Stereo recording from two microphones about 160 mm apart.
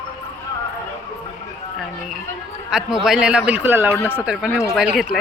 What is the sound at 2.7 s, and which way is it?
A man's voice, 5° right (ahead or behind).